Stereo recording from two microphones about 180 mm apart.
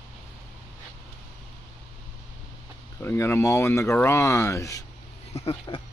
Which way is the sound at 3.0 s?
15° left (ahead or behind).